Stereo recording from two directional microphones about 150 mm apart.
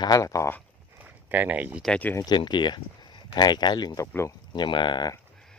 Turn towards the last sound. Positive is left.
turn(degrees=30)  # may be behind; listen again after turning